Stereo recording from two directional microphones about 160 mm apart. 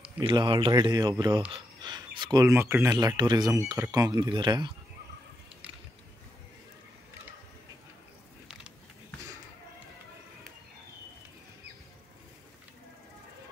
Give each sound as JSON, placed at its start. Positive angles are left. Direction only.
{"t": 0.2, "sound": "speech", "side_deg": -30}
{"t": 2.5, "sound": "speech", "side_deg": -15}